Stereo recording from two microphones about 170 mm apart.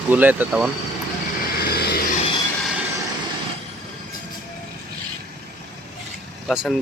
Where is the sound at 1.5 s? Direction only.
65° left (ahead or behind).